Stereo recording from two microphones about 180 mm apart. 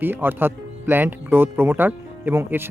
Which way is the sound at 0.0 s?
10° right (ahead or behind).